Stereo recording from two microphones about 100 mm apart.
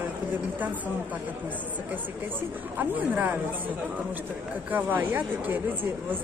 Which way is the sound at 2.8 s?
20° right (ahead or behind).